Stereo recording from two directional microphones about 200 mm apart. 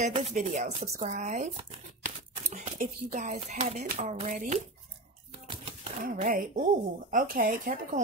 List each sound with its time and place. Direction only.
0.0 s speech: 35° right (ahead or behind)
6.0 s speech: 45° right (ahead or behind)